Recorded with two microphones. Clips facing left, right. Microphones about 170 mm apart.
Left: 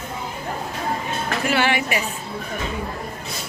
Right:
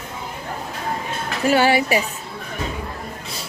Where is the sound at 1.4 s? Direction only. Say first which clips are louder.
Right 6 dB; 40° right (ahead or behind).